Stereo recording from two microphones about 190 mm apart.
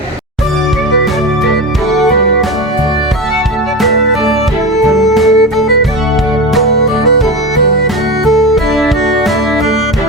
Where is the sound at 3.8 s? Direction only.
Centre (ahead or behind).